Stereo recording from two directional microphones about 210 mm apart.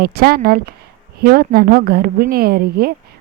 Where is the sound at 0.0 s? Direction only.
45° right (ahead or behind).